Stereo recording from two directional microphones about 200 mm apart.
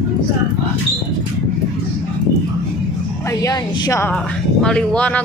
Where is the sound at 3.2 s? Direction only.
20° left (ahead or behind).